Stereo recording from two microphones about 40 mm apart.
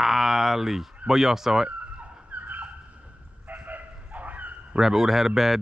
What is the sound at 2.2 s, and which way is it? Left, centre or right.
Turkey, right.